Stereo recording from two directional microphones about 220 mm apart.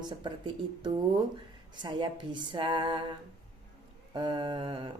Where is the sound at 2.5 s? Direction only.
20° right (ahead or behind).